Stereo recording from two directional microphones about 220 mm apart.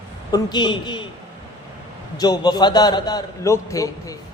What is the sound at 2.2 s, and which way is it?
A man's voice, 20° left (ahead or behind).